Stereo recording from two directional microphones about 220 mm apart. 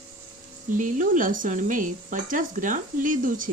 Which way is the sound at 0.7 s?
35° right (ahead or behind).